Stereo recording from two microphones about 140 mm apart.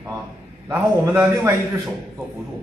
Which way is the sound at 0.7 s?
10° right (ahead or behind).